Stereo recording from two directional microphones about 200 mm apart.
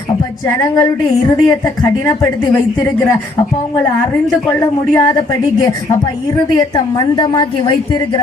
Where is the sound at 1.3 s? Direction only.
15° left (ahead or behind).